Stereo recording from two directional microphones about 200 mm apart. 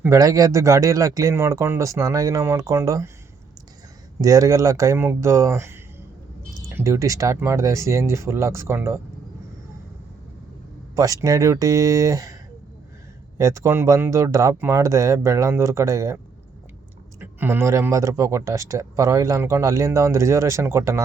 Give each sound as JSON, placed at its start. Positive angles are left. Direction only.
{"t": 0.0, "sound": "speech", "side_deg": -15}
{"t": 4.2, "sound": "speech", "side_deg": -15}
{"t": 6.7, "sound": "speech", "side_deg": -15}
{"t": 10.9, "sound": "speech", "side_deg": -15}
{"t": 13.4, "sound": "speech", "side_deg": -15}